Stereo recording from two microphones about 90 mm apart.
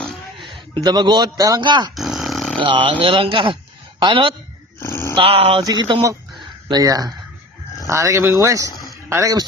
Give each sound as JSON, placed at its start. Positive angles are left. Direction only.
{"t": 0.7, "sound": "a man's voice", "side_deg": -55}
{"t": 1.6, "sound": "speech", "side_deg": -55}
{"t": 2.0, "sound": "dog", "side_deg": -5}
{"t": 2.6, "sound": "speech", "side_deg": -65}
{"t": 4.8, "sound": "a sound", "side_deg": 30}
{"t": 5.1, "sound": "speech", "side_deg": -85}
{"t": 5.6, "sound": "speech", "side_deg": -55}
{"t": 6.7, "sound": "a man's voice", "side_deg": -45}